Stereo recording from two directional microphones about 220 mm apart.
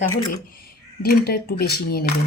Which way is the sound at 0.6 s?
45° left (ahead or behind).